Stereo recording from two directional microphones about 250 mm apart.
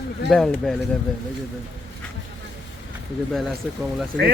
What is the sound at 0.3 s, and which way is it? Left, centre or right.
Speech, centre.